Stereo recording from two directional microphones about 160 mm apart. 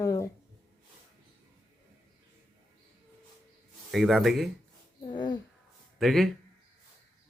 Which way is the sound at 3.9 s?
Centre (ahead or behind).